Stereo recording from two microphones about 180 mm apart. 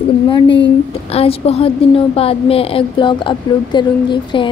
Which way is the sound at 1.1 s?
35° left (ahead or behind).